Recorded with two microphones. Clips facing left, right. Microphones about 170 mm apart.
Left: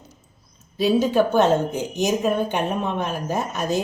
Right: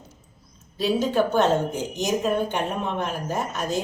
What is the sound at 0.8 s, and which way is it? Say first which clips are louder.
Speech: left 4 dB; 15° left (ahead or behind).